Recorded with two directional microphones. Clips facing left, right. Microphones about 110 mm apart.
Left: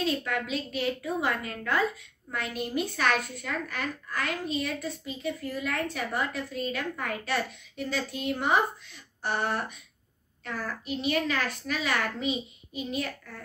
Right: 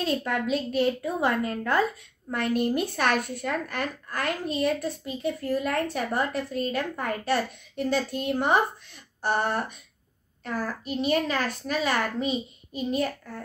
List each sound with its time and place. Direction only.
0.0 s a woman's voice: 40° right (ahead or behind)
2.3 s a woman's voice: 50° right (ahead or behind)